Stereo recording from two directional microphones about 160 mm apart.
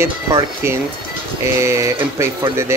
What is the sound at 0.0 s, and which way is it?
Speech, 20° right (ahead or behind).